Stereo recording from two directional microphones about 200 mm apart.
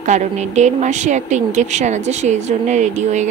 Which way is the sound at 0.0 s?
35° right (ahead or behind).